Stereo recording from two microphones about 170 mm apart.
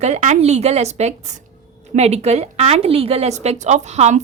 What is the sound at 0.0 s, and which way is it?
A woman's voice, 45° right (ahead or behind).